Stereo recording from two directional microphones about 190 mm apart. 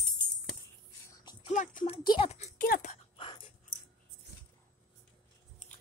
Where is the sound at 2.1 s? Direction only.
30° left (ahead or behind).